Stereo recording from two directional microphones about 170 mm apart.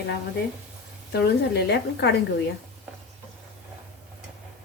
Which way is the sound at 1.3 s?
75° left (ahead or behind).